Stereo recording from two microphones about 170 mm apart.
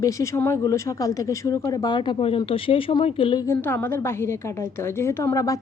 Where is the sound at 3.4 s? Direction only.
10° left (ahead or behind).